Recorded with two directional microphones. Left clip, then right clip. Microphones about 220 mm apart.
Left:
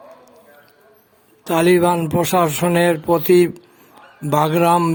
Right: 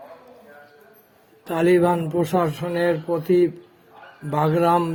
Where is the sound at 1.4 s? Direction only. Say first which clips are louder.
Left 4 dB; 20° left (ahead or behind).